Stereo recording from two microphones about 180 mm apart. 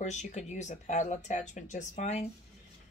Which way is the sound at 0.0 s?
40° left (ahead or behind).